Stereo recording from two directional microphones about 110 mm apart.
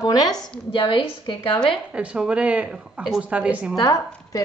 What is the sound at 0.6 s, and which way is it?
Speech, 50° left (ahead or behind).